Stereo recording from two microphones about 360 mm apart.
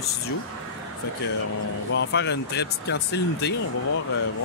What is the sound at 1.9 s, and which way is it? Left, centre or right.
Speech, left.